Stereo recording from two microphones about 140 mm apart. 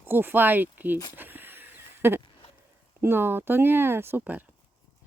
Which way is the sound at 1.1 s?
15° right (ahead or behind).